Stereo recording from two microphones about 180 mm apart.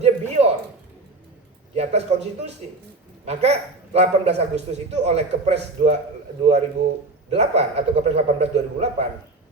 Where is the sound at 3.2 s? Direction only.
35° right (ahead or behind).